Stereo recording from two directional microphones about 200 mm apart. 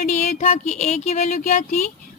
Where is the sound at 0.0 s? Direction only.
35° left (ahead or behind).